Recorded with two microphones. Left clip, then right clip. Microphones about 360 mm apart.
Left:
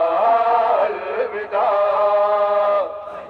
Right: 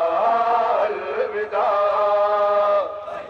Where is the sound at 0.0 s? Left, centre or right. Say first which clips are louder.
Left 3 dB; left.